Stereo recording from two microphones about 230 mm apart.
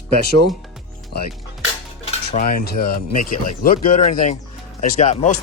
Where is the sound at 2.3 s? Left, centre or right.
Left.